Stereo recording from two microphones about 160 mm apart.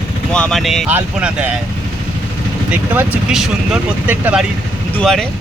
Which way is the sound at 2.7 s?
10° right (ahead or behind).